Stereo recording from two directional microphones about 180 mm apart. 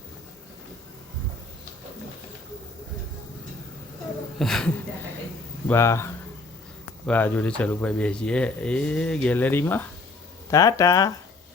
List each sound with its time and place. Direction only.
4.4 s speech: centre (ahead or behind)
5.6 s speech: 15° left (ahead or behind)